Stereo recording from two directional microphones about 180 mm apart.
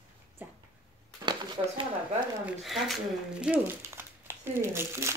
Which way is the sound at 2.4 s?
Centre (ahead or behind).